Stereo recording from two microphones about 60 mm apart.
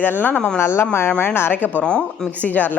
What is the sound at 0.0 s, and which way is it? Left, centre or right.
Speech, left.